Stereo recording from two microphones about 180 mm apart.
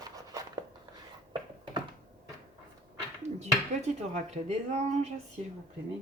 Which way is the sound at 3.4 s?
40° right (ahead or behind).